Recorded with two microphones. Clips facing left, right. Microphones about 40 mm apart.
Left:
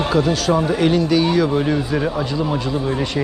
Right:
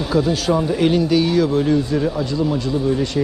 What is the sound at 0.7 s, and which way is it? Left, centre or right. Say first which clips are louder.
Speech: even; centre.